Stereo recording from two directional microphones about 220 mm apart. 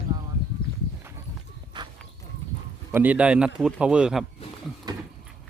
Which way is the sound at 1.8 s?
20° right (ahead or behind).